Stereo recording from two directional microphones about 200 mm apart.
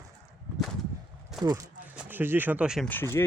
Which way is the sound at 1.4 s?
15° right (ahead or behind).